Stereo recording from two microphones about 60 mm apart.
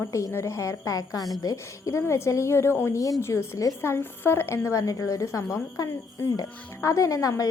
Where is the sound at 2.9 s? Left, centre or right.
Left.